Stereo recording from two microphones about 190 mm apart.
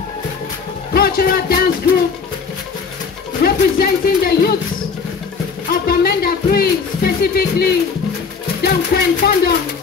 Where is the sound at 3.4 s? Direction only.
55° left (ahead or behind).